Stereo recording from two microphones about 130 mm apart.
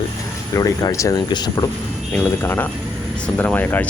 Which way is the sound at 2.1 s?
15° left (ahead or behind).